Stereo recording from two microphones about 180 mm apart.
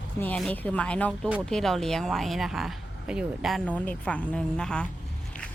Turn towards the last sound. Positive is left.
turn(degrees=5)  # may be behind; listen again after turning